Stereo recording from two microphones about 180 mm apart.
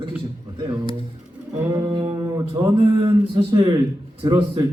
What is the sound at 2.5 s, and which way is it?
Speech, 30° right (ahead or behind).